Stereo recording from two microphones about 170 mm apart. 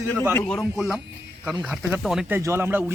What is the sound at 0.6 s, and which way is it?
Speech, 5° right (ahead or behind).